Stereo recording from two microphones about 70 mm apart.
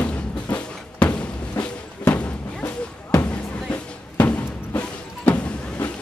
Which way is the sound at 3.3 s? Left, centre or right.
Left.